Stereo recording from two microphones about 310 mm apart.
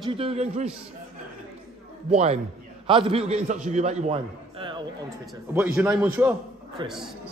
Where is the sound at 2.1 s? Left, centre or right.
Right.